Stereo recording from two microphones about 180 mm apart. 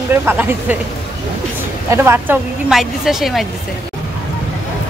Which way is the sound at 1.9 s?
15° right (ahead or behind).